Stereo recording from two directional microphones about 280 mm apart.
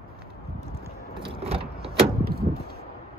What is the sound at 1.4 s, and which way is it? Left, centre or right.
Vehicle, right.